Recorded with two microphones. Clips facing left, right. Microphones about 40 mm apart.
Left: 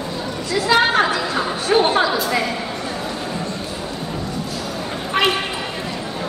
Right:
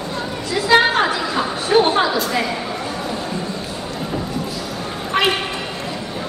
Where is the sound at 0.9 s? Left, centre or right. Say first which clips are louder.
Even; centre.